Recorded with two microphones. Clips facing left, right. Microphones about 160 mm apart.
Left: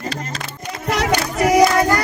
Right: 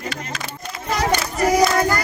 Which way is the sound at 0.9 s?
70° left (ahead or behind).